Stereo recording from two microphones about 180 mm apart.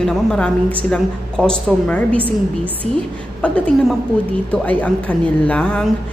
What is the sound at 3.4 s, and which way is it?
Speech, 5° left (ahead or behind).